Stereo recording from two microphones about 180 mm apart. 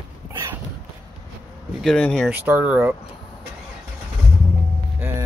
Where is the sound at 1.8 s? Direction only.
5° left (ahead or behind).